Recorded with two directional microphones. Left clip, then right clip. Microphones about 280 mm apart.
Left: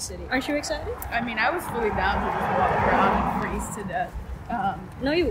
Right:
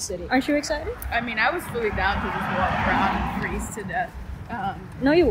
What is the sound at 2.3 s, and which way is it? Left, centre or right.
Speech, left.